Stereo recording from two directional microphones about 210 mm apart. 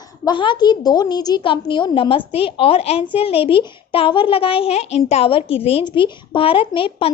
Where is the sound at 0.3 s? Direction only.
20° left (ahead or behind).